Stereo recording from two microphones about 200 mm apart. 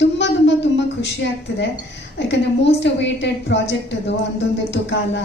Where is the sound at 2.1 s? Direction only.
60° left (ahead or behind).